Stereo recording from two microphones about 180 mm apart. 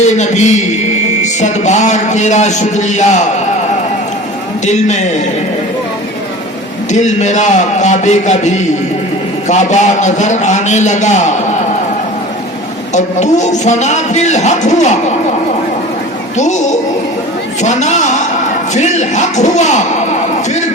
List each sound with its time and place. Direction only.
0.0 s a man's voice: 40° left (ahead or behind)
4.6 s a man's voice: 40° left (ahead or behind)
7.0 s a man's voice: 40° left (ahead or behind)
12.9 s a man's voice: 40° left (ahead or behind)
16.4 s a man's voice: 40° left (ahead or behind)